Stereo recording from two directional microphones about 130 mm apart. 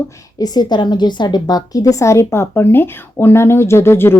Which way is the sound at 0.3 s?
30° left (ahead or behind).